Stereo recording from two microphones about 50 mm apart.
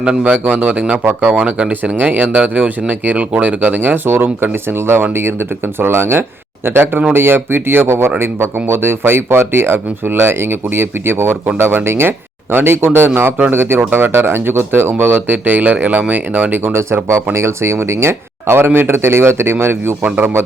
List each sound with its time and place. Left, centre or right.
0.0 s speech: centre
0.4 s speech: right
16.7 s speech: right